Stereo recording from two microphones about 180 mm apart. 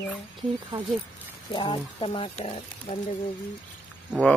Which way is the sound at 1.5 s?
30° left (ahead or behind).